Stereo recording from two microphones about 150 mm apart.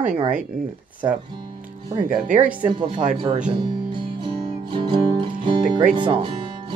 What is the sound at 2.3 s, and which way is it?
Speech, 10° right (ahead or behind).